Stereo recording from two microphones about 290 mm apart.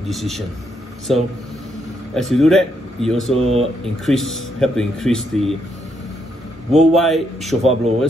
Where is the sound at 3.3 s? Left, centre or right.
Centre.